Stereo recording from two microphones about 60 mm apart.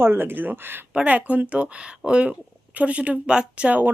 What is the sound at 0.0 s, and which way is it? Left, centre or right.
Speech, right.